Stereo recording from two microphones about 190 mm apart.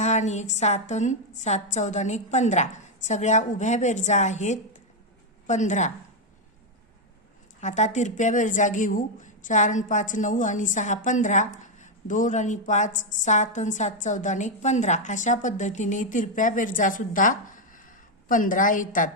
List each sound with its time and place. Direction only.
0.0 s a woman's voice: 40° left (ahead or behind)
7.6 s a woman's voice: 40° left (ahead or behind)